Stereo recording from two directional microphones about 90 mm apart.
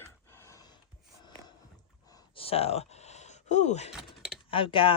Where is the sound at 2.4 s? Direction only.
90° left.